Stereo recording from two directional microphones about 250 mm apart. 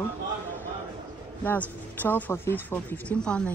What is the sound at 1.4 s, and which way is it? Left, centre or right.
Speech, centre.